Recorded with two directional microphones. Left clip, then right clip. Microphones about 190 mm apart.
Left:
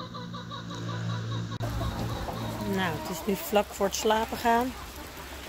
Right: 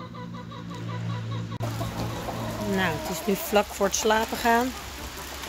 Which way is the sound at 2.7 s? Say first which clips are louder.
Right 4 dB; centre (ahead or behind).